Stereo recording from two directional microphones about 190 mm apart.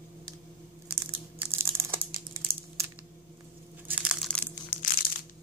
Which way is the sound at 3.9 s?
5° right (ahead or behind).